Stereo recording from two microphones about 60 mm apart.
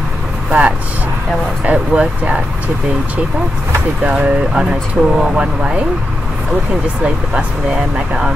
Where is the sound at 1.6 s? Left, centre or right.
Right.